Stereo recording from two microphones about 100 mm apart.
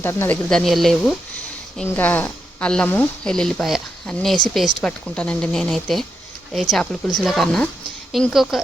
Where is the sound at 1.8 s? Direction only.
20° left (ahead or behind).